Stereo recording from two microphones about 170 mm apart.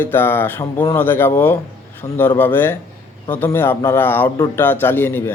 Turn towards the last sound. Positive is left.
turn(degrees=15)  # may be behind; listen again after turning